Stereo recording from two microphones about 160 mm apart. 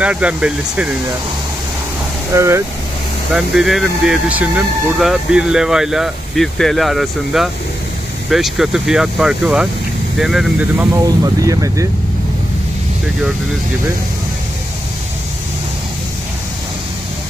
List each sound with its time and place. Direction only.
0.0 s speech: 10° right (ahead or behind)
2.3 s speech: 15° right (ahead or behind)
3.3 s speech: centre (ahead or behind)
11.1 s speech: 20° right (ahead or behind)